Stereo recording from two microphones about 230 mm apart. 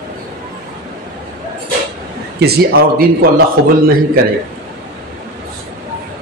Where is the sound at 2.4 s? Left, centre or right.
Right.